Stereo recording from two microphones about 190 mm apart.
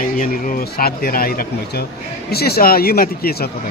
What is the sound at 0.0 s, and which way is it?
Speech, 45° left (ahead or behind).